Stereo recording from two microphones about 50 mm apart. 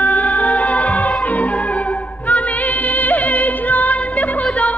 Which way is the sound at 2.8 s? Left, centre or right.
Left.